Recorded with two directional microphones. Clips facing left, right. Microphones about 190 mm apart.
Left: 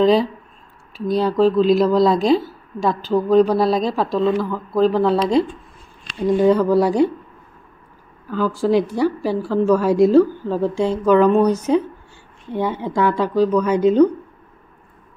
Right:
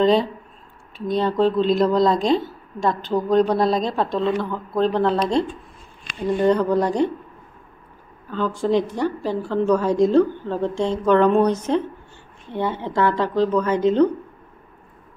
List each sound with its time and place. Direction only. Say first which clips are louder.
0.0 s speech: left 2 dB; centre (ahead or behind)
6.2 s a woman's voice: left 3 dB; 5° left (ahead or behind)
8.3 s a woman's voice: left 3 dB; 5° left (ahead or behind)